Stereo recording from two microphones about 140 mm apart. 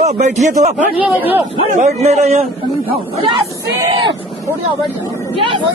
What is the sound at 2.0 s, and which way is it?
Speech, 50° right (ahead or behind).